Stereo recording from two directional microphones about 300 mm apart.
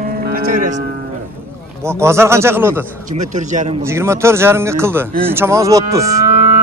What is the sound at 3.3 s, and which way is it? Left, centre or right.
Speech, right.